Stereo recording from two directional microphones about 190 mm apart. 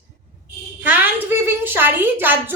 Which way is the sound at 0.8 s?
10° right (ahead or behind).